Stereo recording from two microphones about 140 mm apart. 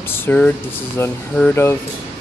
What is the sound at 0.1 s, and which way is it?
Speech, 15° left (ahead or behind).